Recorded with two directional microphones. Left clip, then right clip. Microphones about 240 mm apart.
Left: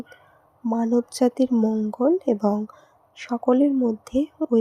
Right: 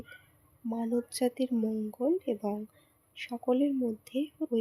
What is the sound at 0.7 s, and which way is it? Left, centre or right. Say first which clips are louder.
Speech: left 10 dB; left.